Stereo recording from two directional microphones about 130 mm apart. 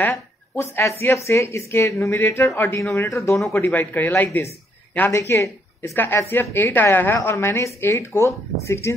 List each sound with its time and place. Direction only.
0.0 s a woman's voice: 20° left (ahead or behind)